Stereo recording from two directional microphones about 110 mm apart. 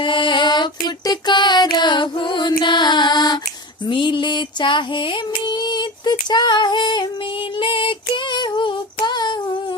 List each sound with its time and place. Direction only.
0.0 s music: 50° left (ahead or behind)
3.8 s a sound: 45° left (ahead or behind)
7.6 s female singing: 55° left (ahead or behind)